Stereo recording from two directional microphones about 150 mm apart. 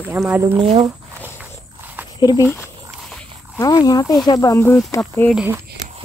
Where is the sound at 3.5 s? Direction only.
25° left (ahead or behind).